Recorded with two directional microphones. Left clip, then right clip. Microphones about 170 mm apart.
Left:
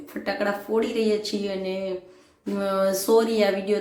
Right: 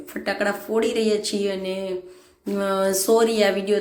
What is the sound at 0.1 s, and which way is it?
Speech, 10° right (ahead or behind).